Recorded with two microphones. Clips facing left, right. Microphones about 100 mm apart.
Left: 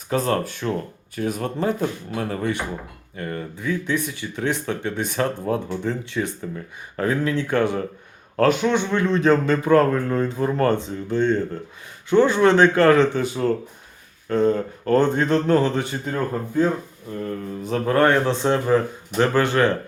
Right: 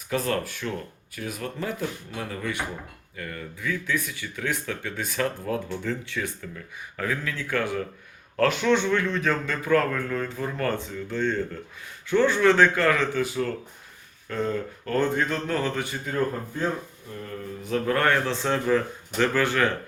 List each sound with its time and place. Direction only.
0.1 s speech: 30° left (ahead or behind)
6.9 s speech: 35° left (ahead or behind); by 12.8 s 20° left (ahead or behind)
12.8 s speech: 30° left (ahead or behind)